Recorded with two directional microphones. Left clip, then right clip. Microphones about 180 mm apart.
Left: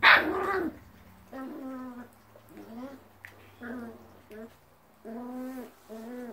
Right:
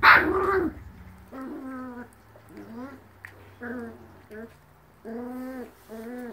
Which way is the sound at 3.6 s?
10° right (ahead or behind).